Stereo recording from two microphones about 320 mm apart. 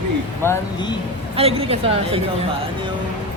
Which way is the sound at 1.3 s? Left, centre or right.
Centre.